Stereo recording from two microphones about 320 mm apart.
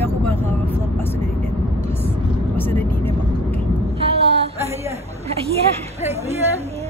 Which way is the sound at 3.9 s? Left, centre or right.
Centre.